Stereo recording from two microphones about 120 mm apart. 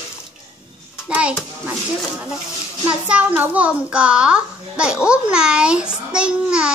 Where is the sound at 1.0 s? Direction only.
10° right (ahead or behind).